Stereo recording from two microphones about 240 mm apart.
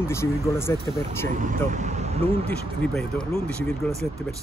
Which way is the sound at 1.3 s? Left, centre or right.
Right.